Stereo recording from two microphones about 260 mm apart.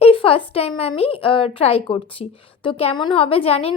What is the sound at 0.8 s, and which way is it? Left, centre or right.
A woman's voice, left.